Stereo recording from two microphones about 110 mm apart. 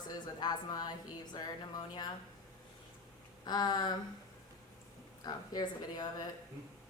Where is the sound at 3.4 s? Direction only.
40° left (ahead or behind).